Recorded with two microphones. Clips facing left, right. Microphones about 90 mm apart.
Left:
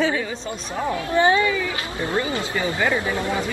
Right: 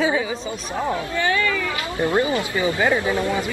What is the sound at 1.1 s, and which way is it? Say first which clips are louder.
Speech: left 6 dB; 20° left (ahead or behind).